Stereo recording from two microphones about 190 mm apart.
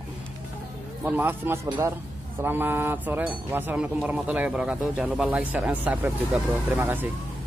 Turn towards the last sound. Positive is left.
turn(degrees=-10)  # may be behind; listen again after turning